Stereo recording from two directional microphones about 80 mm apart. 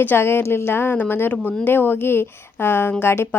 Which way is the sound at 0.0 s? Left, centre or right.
Left.